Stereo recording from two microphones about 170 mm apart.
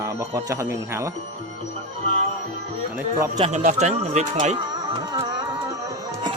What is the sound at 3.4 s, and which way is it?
Speech, 45° right (ahead or behind).